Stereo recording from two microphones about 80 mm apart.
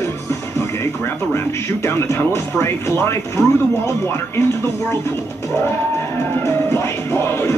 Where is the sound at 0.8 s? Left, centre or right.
Left.